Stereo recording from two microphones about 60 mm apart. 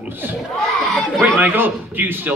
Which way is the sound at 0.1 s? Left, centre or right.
Right.